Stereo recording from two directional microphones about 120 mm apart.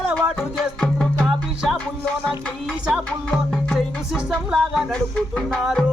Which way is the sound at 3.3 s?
Centre (ahead or behind).